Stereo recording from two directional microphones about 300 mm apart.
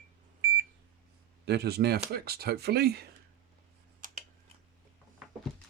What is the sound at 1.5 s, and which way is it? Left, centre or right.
Speech, right.